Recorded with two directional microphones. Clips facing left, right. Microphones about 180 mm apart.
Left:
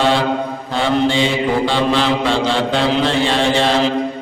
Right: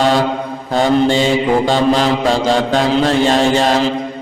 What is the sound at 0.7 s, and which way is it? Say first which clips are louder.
Mantra: right 4 dB; 45° right (ahead or behind).